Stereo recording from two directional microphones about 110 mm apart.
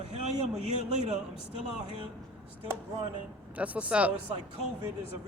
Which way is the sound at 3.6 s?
10° right (ahead or behind).